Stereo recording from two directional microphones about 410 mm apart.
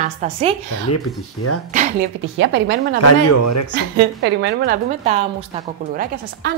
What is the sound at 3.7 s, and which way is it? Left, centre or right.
A woman's voice, right.